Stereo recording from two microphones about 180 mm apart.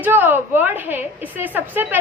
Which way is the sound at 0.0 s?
10° right (ahead or behind).